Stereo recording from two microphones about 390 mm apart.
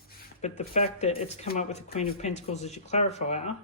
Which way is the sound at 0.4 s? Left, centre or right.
Centre.